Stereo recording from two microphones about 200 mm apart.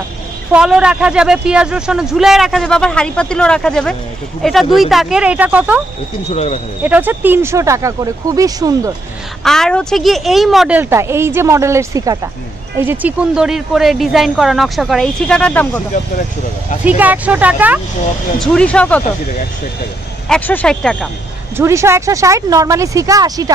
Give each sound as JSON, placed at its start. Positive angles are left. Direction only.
{"t": 0.5, "sound": "speech", "side_deg": -5}
{"t": 6.3, "sound": "speech", "side_deg": 30}
{"t": 6.8, "sound": "a woman's voice", "side_deg": -10}
{"t": 9.4, "sound": "a woman's voice", "side_deg": 0}
{"t": 16.8, "sound": "a woman's voice", "side_deg": -10}
{"t": 18.4, "sound": "speech", "side_deg": 5}
{"t": 20.2, "sound": "speech", "side_deg": 5}
{"t": 21.5, "sound": "a woman's voice", "side_deg": -15}